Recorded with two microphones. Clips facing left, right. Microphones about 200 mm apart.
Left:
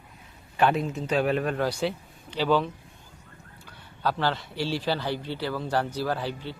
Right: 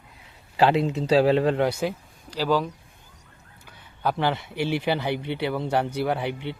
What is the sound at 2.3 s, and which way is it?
Speech, 10° right (ahead or behind).